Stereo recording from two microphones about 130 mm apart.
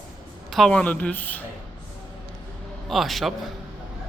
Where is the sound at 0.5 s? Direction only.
5° left (ahead or behind).